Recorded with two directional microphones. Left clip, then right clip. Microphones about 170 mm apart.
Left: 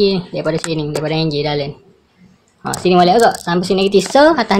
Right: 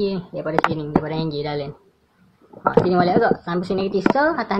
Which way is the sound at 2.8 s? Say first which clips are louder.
Left 12 dB; 20° left (ahead or behind).